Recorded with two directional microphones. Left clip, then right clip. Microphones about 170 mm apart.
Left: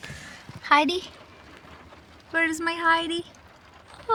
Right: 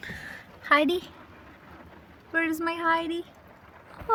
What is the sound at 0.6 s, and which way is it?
Speech, 20° left (ahead or behind).